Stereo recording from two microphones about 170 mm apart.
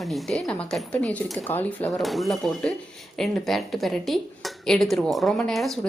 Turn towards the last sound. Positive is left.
turn(degrees=0)  # may be behind; listen again after turning